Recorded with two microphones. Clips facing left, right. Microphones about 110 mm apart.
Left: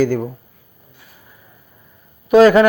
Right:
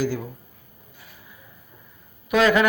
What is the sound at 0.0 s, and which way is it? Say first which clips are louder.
Speech: left 9 dB; 50° left (ahead or behind).